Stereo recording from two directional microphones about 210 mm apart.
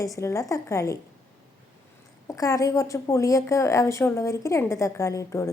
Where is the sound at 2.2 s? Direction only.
15° left (ahead or behind).